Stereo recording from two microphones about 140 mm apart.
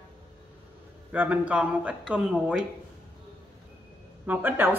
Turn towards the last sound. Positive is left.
turn(degrees=-15)  # may be behind; listen again after turning